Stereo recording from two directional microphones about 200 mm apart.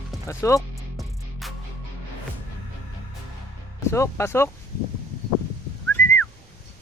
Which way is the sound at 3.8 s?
15° left (ahead or behind).